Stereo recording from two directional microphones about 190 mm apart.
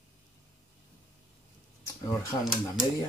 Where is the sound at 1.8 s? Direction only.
15° left (ahead or behind).